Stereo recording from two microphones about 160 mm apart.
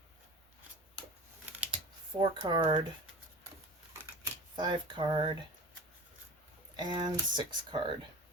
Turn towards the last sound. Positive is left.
turn(degrees=-30)  # may be behind; listen again after turning